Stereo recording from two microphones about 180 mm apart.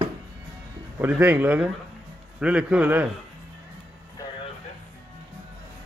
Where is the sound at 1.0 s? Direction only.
10° right (ahead or behind).